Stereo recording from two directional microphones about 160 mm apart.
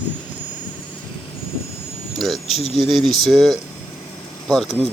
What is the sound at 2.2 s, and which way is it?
Speech, centre (ahead or behind).